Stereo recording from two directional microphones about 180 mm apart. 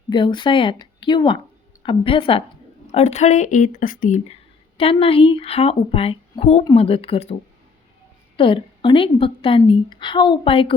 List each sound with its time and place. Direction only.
0.1 s a woman's voice: 25° left (ahead or behind); by 4.2 s 50° left (ahead or behind)
4.8 s speech: 30° left (ahead or behind)
8.4 s a woman's voice: 30° left (ahead or behind)